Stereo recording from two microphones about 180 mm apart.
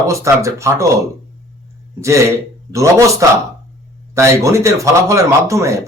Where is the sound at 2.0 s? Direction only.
15° right (ahead or behind).